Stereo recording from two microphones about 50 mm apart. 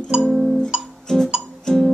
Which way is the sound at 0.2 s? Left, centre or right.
Centre.